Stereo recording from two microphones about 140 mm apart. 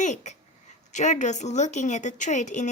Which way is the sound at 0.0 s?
55° left (ahead or behind).